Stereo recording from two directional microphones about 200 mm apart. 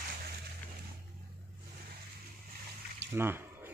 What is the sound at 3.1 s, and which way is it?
Squish, 10° right (ahead or behind).